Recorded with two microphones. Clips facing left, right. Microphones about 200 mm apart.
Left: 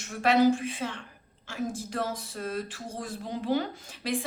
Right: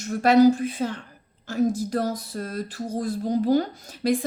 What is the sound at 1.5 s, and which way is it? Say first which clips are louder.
Speech: right 10 dB; 40° right (ahead or behind).